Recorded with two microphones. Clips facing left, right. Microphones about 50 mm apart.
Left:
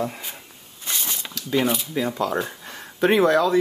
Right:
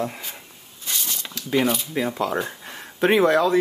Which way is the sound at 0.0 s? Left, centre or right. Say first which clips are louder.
Even; centre.